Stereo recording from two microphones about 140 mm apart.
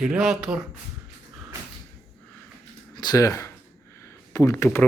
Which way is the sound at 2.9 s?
30° left (ahead or behind).